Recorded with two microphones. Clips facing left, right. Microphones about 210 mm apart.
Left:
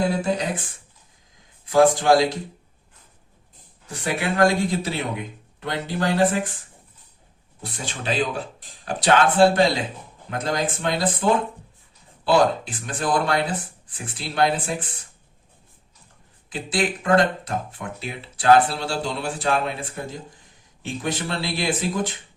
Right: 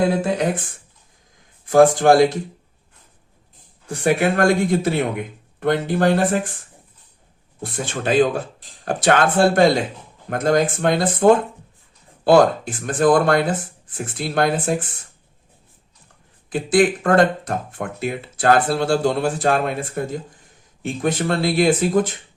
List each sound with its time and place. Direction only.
0.2 s speech: 55° right (ahead or behind)
3.8 s speech: 50° right (ahead or behind)
7.6 s speech: 50° right (ahead or behind)
16.5 s speech: 50° right (ahead or behind)